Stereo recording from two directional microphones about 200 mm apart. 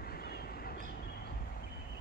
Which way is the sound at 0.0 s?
50° left (ahead or behind).